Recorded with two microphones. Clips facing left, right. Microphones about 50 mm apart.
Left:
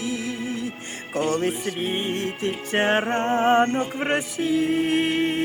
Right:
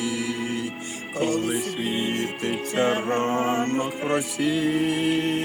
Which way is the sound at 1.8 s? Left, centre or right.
Left.